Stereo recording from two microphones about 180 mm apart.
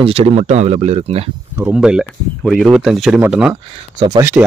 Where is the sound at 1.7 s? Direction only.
5° right (ahead or behind).